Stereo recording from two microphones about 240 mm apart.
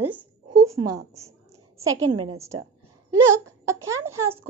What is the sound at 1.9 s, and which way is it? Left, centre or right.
Speech, right.